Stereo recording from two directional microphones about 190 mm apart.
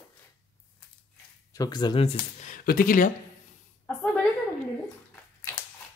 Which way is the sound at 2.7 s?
50° left (ahead or behind).